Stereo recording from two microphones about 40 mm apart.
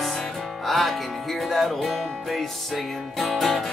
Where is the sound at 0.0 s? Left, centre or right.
Centre.